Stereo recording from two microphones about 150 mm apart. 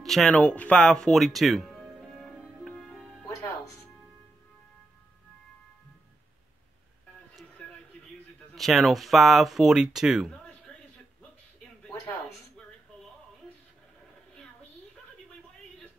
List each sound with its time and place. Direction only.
0.0 s music: centre (ahead or behind)
3.3 s music: 20° left (ahead or behind)
8.5 s speech: centre (ahead or behind)
11.9 s a sound: 15° left (ahead or behind)